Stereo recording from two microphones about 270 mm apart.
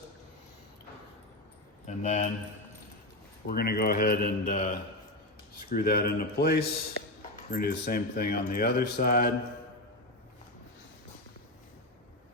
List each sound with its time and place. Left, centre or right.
1.9 s speech: left
3.4 s speech: left
5.7 s speech: left